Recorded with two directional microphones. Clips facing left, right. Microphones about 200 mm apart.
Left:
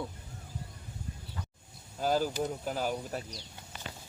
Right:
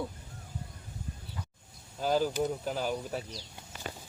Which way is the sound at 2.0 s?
5° left (ahead or behind).